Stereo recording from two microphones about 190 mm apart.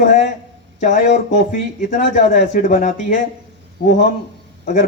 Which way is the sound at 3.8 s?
50° left (ahead or behind).